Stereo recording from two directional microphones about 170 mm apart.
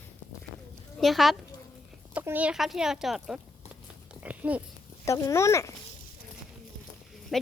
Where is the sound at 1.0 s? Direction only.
Centre (ahead or behind).